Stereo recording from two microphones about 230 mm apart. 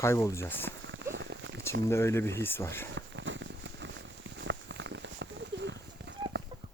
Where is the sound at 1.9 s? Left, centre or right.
Centre.